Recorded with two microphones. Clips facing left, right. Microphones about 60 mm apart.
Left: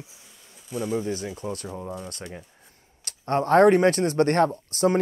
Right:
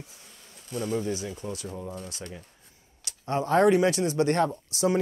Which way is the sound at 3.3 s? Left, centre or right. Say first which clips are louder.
Left 4 dB; left.